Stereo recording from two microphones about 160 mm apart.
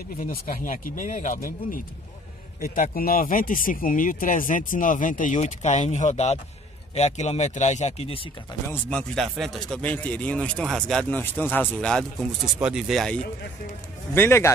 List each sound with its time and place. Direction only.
0.2 s speech: 60° left (ahead or behind); by 8.3 s 40° left (ahead or behind)
8.9 s a man's voice: 5° left (ahead or behind)
14.1 s a man's voice: 15° left (ahead or behind)